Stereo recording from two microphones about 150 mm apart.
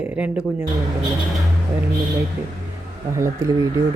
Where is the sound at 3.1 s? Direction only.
20° right (ahead or behind).